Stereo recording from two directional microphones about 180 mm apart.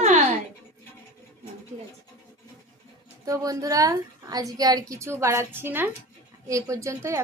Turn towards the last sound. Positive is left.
turn(degrees=-15)  # may be behind; listen again after turning